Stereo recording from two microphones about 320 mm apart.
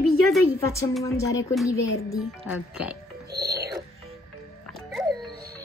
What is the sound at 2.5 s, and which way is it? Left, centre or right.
Speech, centre.